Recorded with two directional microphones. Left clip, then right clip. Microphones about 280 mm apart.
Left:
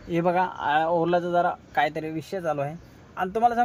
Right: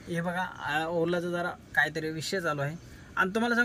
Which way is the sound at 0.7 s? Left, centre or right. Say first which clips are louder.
Left 6 dB; left.